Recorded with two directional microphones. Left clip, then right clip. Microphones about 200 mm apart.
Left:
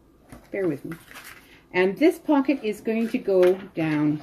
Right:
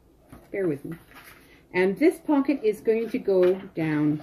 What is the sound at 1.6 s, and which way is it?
Speech, 5° left (ahead or behind).